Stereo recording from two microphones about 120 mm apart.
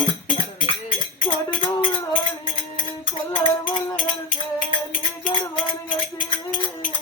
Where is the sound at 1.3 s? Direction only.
40° left (ahead or behind).